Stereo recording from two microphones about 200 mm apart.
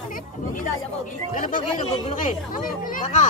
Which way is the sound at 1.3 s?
40° left (ahead or behind).